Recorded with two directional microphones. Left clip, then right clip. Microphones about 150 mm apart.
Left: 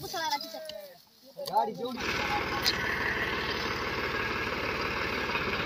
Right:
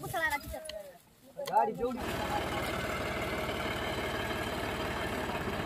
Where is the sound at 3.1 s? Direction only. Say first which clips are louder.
Left 4 dB; 65° right (ahead or behind).